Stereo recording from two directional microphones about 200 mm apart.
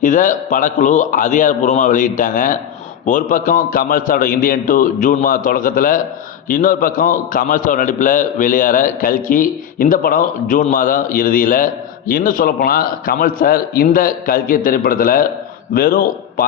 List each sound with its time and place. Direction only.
0.0 s a man's voice: 40° left (ahead or behind)